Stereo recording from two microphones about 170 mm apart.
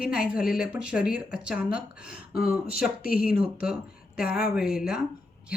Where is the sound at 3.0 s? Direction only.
60° left (ahead or behind).